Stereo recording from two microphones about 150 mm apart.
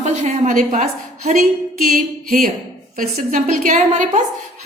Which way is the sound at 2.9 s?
65° right (ahead or behind).